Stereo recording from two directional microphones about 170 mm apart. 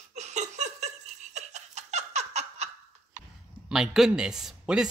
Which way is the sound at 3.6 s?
5° right (ahead or behind).